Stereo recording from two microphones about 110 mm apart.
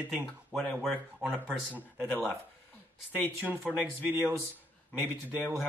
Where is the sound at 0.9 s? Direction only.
15° right (ahead or behind).